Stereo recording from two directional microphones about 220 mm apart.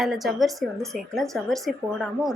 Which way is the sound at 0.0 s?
Centre (ahead or behind).